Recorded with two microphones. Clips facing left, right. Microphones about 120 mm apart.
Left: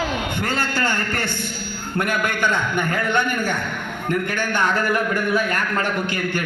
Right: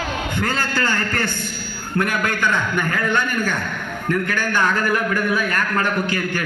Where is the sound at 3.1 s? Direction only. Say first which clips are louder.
Even; 20° left (ahead or behind).